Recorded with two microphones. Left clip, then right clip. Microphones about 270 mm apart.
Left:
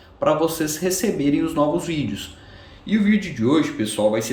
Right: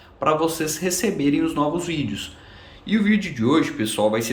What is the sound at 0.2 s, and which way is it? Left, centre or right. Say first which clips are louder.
Speech: left 1 dB; centre.